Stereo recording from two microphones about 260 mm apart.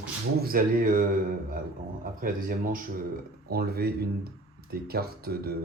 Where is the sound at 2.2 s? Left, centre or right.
Right.